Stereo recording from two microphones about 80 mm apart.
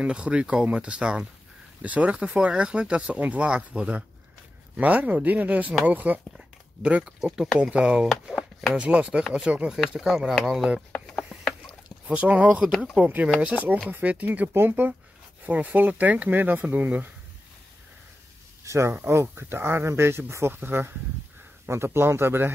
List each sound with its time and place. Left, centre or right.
0.0 s speech: centre
6.3 s dog: centre
7.3 s speech: centre
8.1 s a sound: centre
8.7 s speech: centre
9.7 s speech: centre
11.3 s a sound: centre
12.1 s speech: centre
18.6 s speech: right